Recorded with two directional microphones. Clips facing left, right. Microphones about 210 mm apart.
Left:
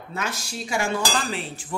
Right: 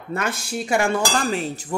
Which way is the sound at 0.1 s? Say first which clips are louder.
Right 6 dB; 55° right (ahead or behind).